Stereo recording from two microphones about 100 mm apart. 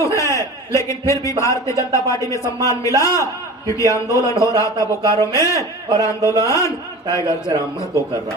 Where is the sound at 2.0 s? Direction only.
35° left (ahead or behind).